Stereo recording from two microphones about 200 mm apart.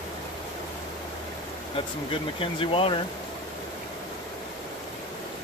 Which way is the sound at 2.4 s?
25° left (ahead or behind).